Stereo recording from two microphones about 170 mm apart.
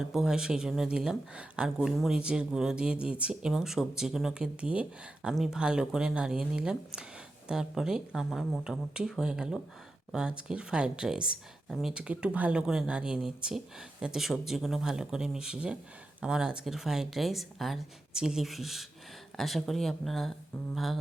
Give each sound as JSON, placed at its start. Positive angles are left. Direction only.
{"t": 0.0, "sound": "speech", "side_deg": -5}